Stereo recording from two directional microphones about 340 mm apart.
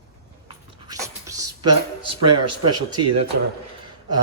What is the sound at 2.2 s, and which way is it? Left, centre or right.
Speech, right.